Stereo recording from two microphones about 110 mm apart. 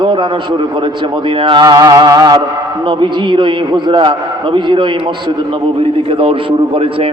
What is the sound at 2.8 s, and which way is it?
A man's voice, 45° right (ahead or behind).